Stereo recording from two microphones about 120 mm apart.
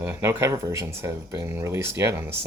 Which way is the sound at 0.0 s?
20° right (ahead or behind).